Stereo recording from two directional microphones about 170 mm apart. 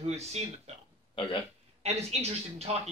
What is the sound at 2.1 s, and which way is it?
Speech, 35° right (ahead or behind).